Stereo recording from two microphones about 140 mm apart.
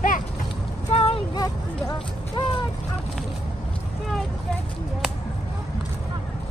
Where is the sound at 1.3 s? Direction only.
30° left (ahead or behind).